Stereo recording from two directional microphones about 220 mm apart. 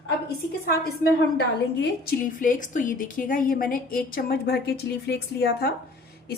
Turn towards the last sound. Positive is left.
turn(degrees=45)  # may be behind; listen again after turning